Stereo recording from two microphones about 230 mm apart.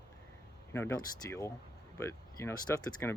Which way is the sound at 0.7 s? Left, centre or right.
Centre.